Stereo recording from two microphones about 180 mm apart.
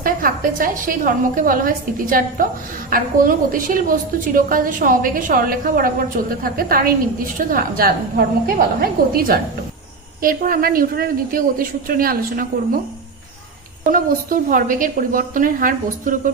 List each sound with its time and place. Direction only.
0.0 s a woman's voice: 50° right (ahead or behind)
13.9 s a woman's voice: 50° right (ahead or behind)